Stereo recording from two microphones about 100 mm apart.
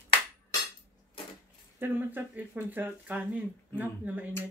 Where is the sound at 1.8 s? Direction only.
20° right (ahead or behind).